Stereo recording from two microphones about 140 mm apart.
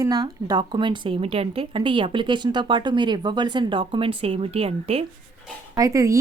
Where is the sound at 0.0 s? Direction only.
30° right (ahead or behind); by 5.0 s 45° right (ahead or behind).